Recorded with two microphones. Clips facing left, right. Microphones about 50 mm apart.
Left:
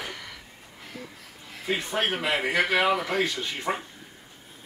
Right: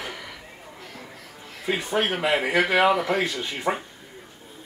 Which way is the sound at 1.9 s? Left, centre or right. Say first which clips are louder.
Right 4 dB; centre.